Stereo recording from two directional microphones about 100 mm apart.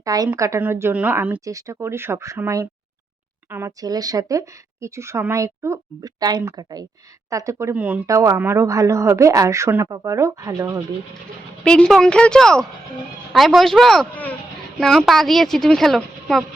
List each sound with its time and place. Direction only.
0.0 s a woman's voice: 40° right (ahead or behind); by 1.4 s 15° right (ahead or behind)
1.5 s speech: 35° right (ahead or behind)
3.5 s speech: 30° right (ahead or behind)
6.0 s speech: 40° right (ahead or behind)
7.7 s speech: 15° right (ahead or behind)
8.0 s speech: 30° right (ahead or behind)
11.6 s a woman's voice: 10° left (ahead or behind)